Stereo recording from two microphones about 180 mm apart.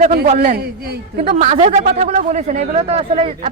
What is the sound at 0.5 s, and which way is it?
Speech, 60° right (ahead or behind).